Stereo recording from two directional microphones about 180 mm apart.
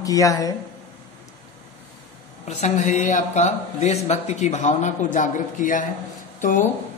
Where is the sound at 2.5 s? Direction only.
40° left (ahead or behind).